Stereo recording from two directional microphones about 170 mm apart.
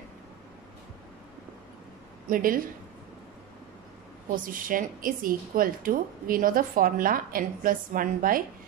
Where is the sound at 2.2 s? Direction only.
55° right (ahead or behind).